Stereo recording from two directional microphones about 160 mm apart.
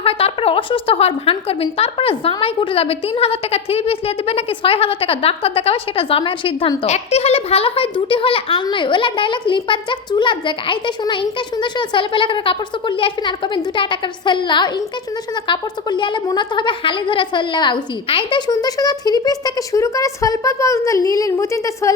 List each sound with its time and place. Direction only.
0.0 s a woman's voice: 35° left (ahead or behind); by 21.9 s 20° left (ahead or behind)